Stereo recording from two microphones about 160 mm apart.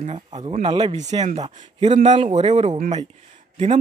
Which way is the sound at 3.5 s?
45° right (ahead or behind).